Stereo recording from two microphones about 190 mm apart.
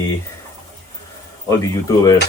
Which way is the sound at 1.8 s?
20° left (ahead or behind).